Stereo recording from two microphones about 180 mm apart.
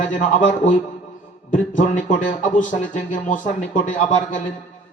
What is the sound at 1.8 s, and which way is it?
Speech, 45° left (ahead or behind).